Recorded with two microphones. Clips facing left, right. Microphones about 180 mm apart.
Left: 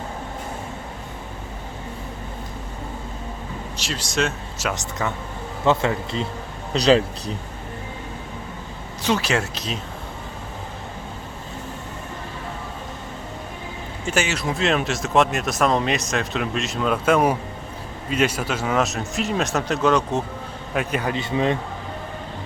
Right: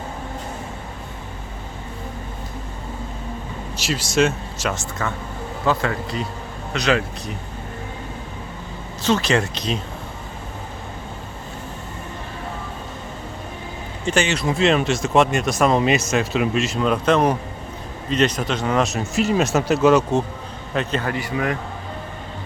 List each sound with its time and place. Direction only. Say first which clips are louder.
3.8 s speech: right 6 dB; 5° right (ahead or behind)
4.7 s a man's voice: even; 20° left (ahead or behind)
6.7 s speech: left 4 dB; 35° left (ahead or behind)
9.0 s speech: right 3 dB; 10° left (ahead or behind)
14.0 s speech: right 3 dB; 5° left (ahead or behind)
20.7 s a man's voice: right 1 dB; 10° left (ahead or behind)